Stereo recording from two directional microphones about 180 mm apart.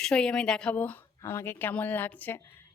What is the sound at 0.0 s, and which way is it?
Speech, 5° left (ahead or behind).